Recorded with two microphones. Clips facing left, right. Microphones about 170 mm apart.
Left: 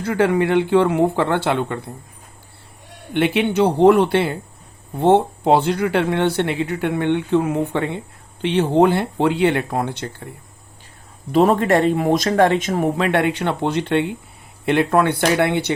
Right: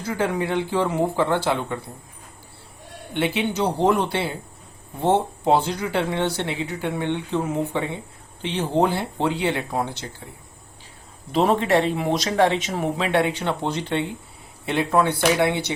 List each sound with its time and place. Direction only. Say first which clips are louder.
0.0 s speech: left 7 dB; 65° left (ahead or behind)
3.1 s speech: left 5 dB; 60° left (ahead or behind)
11.3 s speech: left 4 dB; 50° left (ahead or behind)